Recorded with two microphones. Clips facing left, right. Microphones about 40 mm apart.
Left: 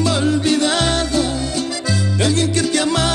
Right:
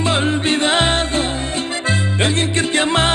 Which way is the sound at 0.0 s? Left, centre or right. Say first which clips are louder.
Left 1 dB; right.